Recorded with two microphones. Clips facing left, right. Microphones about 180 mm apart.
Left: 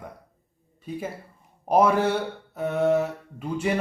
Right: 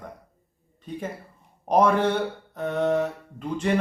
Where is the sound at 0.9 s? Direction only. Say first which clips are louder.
Left 1 dB; 5° left (ahead or behind).